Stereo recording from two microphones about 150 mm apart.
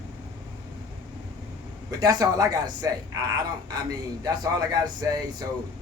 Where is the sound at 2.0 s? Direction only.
25° right (ahead or behind).